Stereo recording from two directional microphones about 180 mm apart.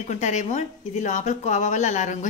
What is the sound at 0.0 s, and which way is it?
A woman's voice, 40° left (ahead or behind).